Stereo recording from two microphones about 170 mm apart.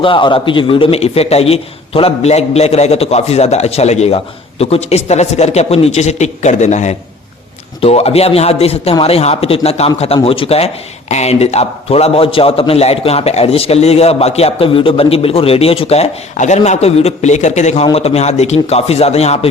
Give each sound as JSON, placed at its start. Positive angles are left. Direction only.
{"t": 0.0, "sound": "a man's voice", "side_deg": 30}